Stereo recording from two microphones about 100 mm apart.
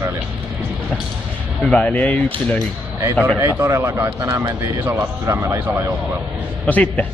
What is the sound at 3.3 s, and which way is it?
Speech, 25° right (ahead or behind).